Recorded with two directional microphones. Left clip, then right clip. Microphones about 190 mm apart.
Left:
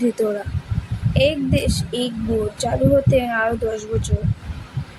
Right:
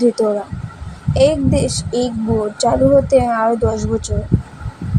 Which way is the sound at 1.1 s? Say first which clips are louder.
Right 5 dB; 15° right (ahead or behind).